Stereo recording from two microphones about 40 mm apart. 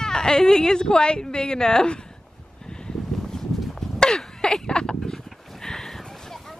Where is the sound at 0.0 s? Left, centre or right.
Centre.